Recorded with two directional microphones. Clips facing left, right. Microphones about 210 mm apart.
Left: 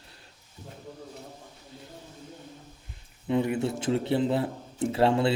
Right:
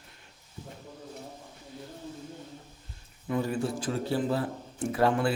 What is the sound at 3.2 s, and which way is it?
A man's voice, 20° left (ahead or behind).